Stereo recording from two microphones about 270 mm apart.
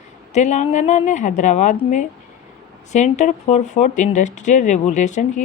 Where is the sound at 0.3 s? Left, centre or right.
Left.